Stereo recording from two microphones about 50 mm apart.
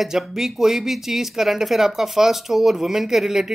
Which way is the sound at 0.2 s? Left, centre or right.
Centre.